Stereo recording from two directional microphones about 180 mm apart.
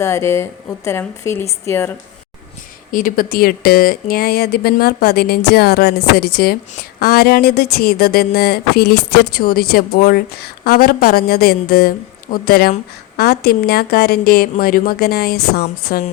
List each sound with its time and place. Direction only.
0.0 s a woman's voice: 15° left (ahead or behind)
2.9 s speech: 50° left (ahead or behind)
15.9 s speech: 45° left (ahead or behind)